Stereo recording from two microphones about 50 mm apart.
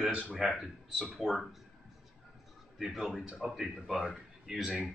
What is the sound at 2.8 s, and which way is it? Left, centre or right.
Speech, centre.